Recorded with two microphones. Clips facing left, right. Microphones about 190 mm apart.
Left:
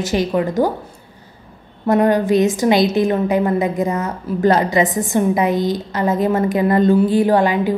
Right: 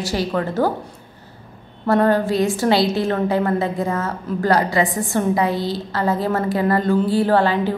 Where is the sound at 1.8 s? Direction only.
15° left (ahead or behind).